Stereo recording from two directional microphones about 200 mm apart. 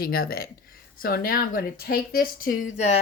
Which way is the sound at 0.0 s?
50° left (ahead or behind).